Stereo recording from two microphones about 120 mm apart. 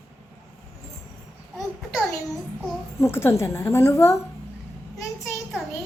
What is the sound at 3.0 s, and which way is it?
A woman's voice, 20° left (ahead or behind).